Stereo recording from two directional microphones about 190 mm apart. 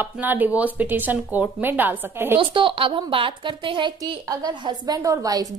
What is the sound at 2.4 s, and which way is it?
A woman's voice, 25° right (ahead or behind).